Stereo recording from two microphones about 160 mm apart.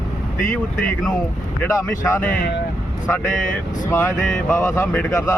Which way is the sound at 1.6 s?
15° left (ahead or behind).